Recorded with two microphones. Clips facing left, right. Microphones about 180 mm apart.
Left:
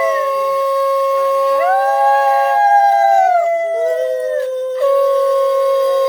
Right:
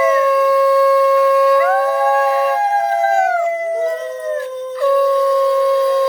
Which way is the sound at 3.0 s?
40° left (ahead or behind).